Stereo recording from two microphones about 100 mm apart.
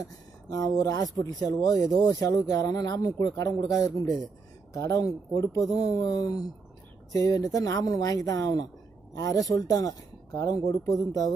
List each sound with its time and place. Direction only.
0.5 s speech: 35° left (ahead or behind)